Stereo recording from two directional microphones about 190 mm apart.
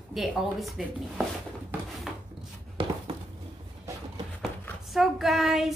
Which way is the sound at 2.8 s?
30° right (ahead or behind).